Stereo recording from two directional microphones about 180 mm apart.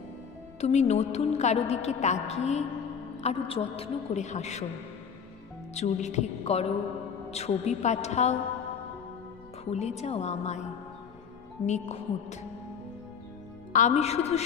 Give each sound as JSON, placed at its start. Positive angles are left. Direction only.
{"t": 0.6, "sound": "a woman's voice", "side_deg": 40}
{"t": 5.8, "sound": "a woman's voice", "side_deg": 40}
{"t": 9.7, "sound": "a woman's voice", "side_deg": 35}
{"t": 11.6, "sound": "a woman's voice", "side_deg": 40}
{"t": 13.7, "sound": "a woman's voice", "side_deg": 40}